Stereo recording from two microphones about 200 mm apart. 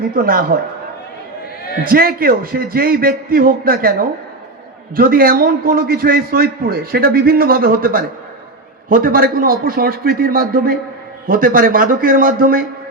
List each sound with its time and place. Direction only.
0.2 s a man's voice: 45° right (ahead or behind)
1.8 s a man's voice: 45° right (ahead or behind)
4.9 s a man's voice: 45° right (ahead or behind)